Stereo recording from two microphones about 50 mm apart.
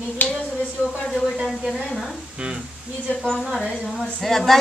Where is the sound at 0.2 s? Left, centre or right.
Left.